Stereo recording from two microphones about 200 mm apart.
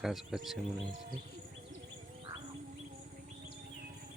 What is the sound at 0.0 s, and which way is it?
Speech, centre (ahead or behind).